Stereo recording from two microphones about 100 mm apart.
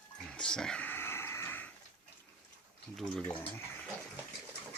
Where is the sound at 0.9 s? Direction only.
25° left (ahead or behind).